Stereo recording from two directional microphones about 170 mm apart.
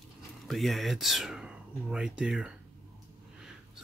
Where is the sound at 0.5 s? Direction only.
Centre (ahead or behind).